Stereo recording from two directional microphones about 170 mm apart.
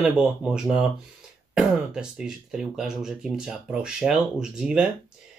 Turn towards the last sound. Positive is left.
turn(degrees=-5)  # may be behind; listen again after turning